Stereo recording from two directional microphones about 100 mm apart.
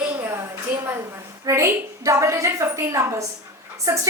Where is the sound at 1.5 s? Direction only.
30° right (ahead or behind).